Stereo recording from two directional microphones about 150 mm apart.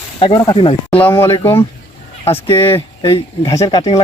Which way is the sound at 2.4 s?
15° left (ahead or behind).